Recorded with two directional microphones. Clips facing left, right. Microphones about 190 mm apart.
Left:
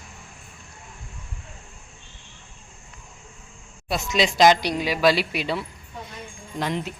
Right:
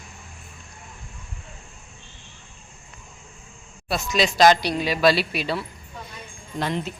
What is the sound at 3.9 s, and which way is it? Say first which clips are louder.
Speech: even; 20° left (ahead or behind).